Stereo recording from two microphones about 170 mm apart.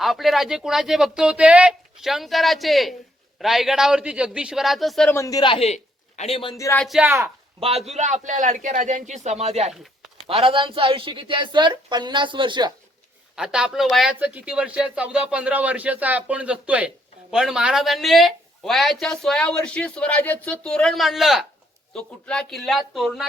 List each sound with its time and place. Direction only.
0.0 s speech: centre (ahead or behind)
5.1 s a man's voice: 20° left (ahead or behind)
6.6 s speech: 15° left (ahead or behind)
6.8 s speech: centre (ahead or behind)
7.9 s a man's voice: 45° right (ahead or behind); by 12.7 s 25° right (ahead or behind)
13.3 s speech: 5° right (ahead or behind)